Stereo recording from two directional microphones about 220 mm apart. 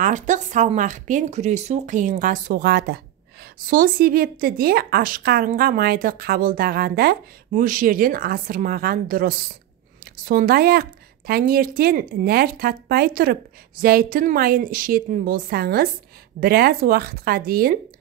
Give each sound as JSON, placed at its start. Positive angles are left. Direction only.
{"t": 0.0, "sound": "a woman's voice", "side_deg": -35}